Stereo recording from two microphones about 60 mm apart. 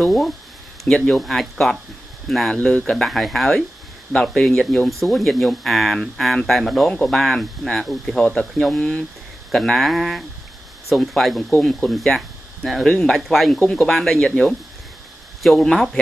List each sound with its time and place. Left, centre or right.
0.0 s speech: centre
0.8 s speech: centre
1.1 s speech: centre
2.5 s speech: centre
3.1 s speech: centre
8.2 s speech: centre
12.8 s speech: centre
13.3 s speech: centre